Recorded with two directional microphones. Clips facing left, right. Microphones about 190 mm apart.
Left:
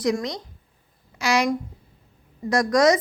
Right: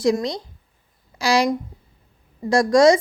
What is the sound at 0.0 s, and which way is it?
A woman's voice, 30° right (ahead or behind).